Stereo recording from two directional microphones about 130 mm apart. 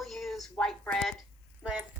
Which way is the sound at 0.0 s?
Centre (ahead or behind).